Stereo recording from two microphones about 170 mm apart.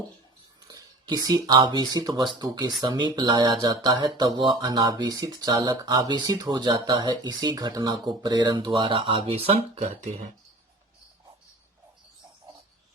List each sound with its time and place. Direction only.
0.7 s speech: 25° right (ahead or behind); by 10.2 s 45° right (ahead or behind)